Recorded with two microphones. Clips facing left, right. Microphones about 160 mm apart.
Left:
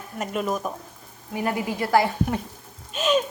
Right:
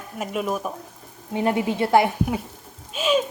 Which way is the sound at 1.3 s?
25° right (ahead or behind).